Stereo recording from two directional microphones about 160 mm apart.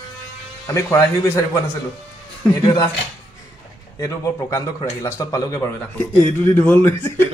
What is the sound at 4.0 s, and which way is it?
A man's voice, 20° left (ahead or behind).